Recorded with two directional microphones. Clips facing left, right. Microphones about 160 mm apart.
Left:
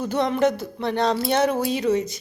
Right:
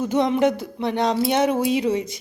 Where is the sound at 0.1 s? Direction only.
20° right (ahead or behind).